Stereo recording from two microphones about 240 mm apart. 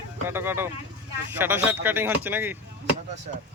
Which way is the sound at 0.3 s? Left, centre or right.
Centre.